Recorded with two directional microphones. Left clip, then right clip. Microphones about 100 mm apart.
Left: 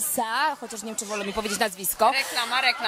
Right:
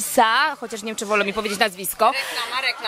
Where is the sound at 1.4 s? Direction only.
10° left (ahead or behind).